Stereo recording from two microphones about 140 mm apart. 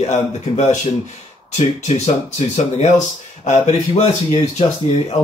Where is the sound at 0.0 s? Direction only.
55° left (ahead or behind).